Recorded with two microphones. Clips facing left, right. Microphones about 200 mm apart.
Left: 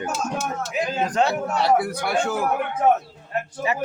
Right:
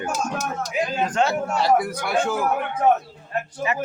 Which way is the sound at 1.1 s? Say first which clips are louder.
Left 2 dB; 35° left (ahead or behind).